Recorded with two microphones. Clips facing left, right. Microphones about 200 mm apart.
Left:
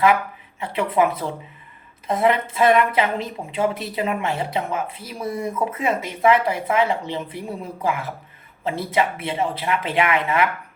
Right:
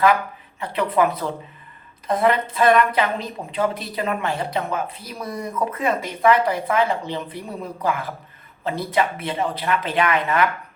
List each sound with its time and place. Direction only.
0.6 s a woman's voice: 25° left (ahead or behind)